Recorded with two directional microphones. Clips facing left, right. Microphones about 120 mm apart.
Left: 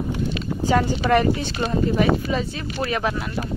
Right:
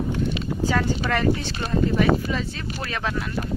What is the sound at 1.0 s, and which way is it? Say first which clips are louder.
Speech: left 4 dB; 20° left (ahead or behind).